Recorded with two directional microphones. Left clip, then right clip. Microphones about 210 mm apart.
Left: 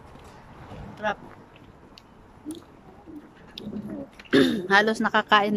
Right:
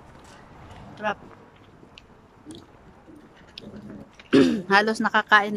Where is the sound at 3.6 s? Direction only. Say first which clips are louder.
Left 2 dB; centre (ahead or behind).